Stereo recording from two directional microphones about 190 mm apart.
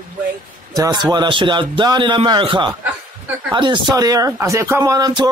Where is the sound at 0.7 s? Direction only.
20° right (ahead or behind).